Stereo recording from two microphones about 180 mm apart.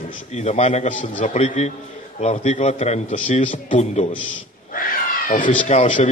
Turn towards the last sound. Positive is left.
turn(degrees=40)  # may be behind; listen again after turning